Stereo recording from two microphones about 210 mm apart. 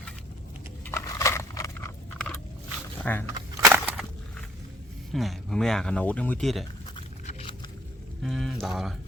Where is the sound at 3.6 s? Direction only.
10° right (ahead or behind).